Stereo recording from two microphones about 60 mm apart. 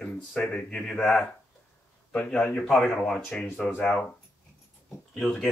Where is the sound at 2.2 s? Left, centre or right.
Centre.